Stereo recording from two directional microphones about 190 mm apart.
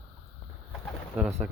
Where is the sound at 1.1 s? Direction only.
Centre (ahead or behind).